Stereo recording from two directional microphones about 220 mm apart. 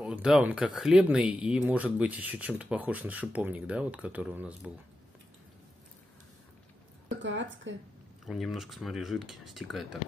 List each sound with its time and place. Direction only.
0.0 s speech: 5° right (ahead or behind)
7.1 s a woman's voice: 55° right (ahead or behind)
8.3 s speech: centre (ahead or behind)